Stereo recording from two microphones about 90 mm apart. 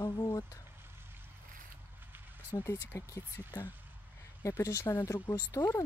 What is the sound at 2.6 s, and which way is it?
Speech, 35° left (ahead or behind).